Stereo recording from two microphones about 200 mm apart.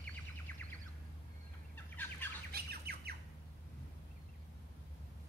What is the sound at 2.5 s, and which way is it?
Squawk, 50° right (ahead or behind).